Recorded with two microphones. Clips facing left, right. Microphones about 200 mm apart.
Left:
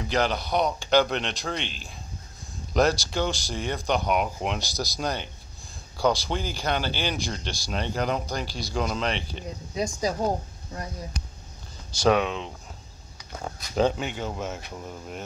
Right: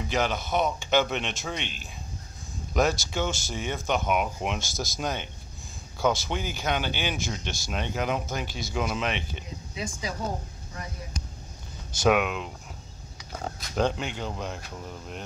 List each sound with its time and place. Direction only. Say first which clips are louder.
0.1 s speech: left 2 dB; 5° right (ahead or behind)
2.7 s speech: left 2 dB; centre (ahead or behind)
9.8 s speech: left 7 dB; 40° left (ahead or behind)
12.1 s speech: left 1 dB; 5° right (ahead or behind)
13.6 s speech: left 3 dB; centre (ahead or behind)